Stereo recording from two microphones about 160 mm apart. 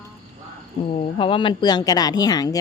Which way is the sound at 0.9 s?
35° left (ahead or behind).